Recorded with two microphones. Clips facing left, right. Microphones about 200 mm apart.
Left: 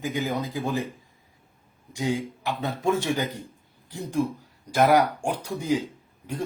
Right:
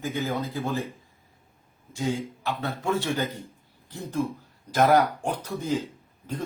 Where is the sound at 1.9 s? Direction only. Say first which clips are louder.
Left 1 dB; 15° left (ahead or behind).